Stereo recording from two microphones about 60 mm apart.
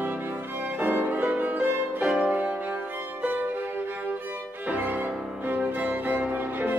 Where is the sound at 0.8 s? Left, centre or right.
Right.